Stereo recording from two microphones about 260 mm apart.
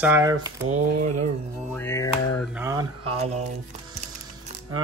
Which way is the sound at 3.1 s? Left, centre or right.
Right.